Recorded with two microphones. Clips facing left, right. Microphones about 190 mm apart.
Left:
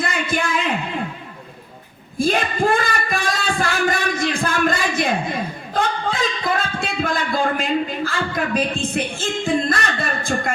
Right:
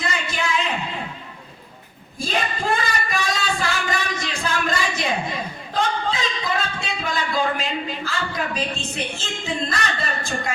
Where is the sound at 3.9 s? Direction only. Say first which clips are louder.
Left 5 dB; 50° left (ahead or behind).